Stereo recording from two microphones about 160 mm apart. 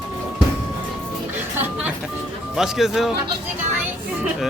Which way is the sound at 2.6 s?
Centre (ahead or behind).